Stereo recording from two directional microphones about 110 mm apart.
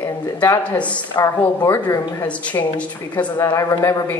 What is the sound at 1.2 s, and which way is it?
Speech, 30° left (ahead or behind).